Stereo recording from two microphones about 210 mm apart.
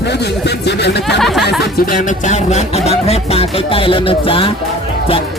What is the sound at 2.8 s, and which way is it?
Music, 30° left (ahead or behind).